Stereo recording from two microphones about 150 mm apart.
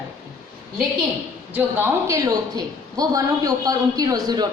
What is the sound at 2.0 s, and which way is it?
A woman's voice, 25° right (ahead or behind).